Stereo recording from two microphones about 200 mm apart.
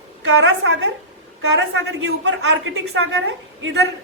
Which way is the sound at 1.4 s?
65° right (ahead or behind).